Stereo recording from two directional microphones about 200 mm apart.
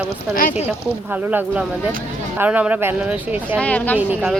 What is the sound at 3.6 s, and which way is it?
Speech, 5° left (ahead or behind).